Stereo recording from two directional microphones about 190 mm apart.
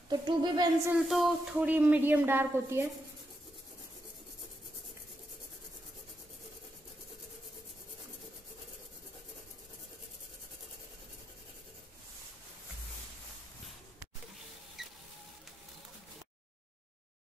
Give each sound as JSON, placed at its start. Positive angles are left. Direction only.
{"t": 0.1, "sound": "speech", "side_deg": -20}
{"t": 0.9, "sound": "a woman's voice", "side_deg": 0}
{"t": 14.8, "sound": "music", "side_deg": 0}